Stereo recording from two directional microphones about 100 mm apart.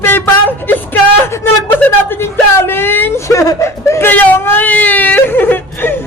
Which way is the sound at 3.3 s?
30° left (ahead or behind).